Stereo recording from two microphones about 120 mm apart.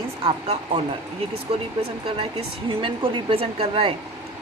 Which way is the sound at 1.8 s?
50° right (ahead or behind).